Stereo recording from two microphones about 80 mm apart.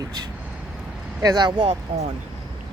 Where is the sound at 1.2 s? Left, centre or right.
Right.